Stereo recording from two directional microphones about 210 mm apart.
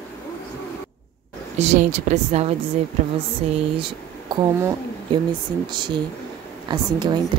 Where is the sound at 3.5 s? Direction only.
25° right (ahead or behind).